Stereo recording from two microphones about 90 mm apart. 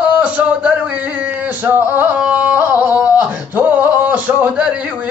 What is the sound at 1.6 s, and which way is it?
Singing, 20° right (ahead or behind).